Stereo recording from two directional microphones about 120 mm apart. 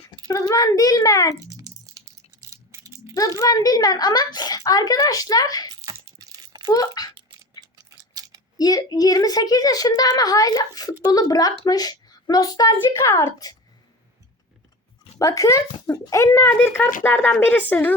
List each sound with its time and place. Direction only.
0.3 s a child's voice: 30° left (ahead or behind)
1.4 s a sound: 30° right (ahead or behind)
2.5 s rattle: 25° right (ahead or behind)
3.2 s a child's voice: 30° left (ahead or behind)
5.8 s crumpling: 30° right (ahead or behind)
6.7 s a child's voice: 30° left (ahead or behind)
7.6 s a sound: 30° right (ahead or behind)
8.5 s a child's voice: 30° left (ahead or behind)
15.2 s a child's voice: 25° left (ahead or behind)
16.4 s speech: 15° left (ahead or behind)